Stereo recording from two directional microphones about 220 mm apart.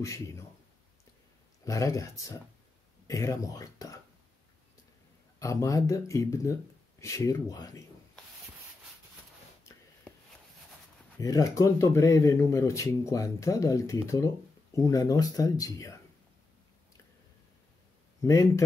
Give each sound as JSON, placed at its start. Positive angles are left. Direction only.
{"t": 0.0, "sound": "speech", "side_deg": 15}
{"t": 1.6, "sound": "speech", "side_deg": 15}
{"t": 5.4, "sound": "speech", "side_deg": 15}
{"t": 11.1, "sound": "speech", "side_deg": 15}
{"t": 18.2, "sound": "a man's voice", "side_deg": 15}